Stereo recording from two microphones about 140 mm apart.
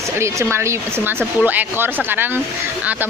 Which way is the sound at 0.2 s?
20° right (ahead or behind).